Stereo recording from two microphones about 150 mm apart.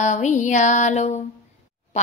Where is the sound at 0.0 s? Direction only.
55° left (ahead or behind).